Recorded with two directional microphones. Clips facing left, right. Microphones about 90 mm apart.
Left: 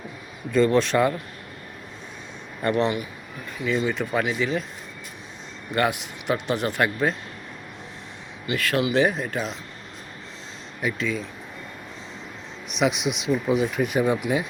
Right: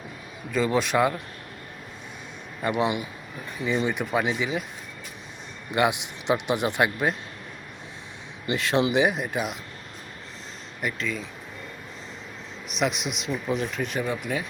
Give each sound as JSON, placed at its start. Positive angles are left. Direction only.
{"t": 0.5, "sound": "speech", "side_deg": -10}
{"t": 2.6, "sound": "speech", "side_deg": -15}
{"t": 5.7, "sound": "speech", "side_deg": -20}
{"t": 8.4, "sound": "speech", "side_deg": -25}
{"t": 10.8, "sound": "speech", "side_deg": 0}
{"t": 12.6, "sound": "speech", "side_deg": 0}